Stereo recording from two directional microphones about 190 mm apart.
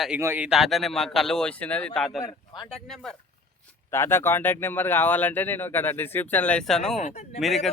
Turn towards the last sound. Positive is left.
turn(degrees=0)  # may be behind; listen again after turning